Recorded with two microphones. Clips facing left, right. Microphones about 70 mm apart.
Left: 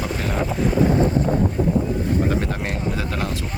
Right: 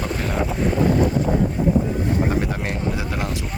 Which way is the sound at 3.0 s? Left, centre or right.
Centre.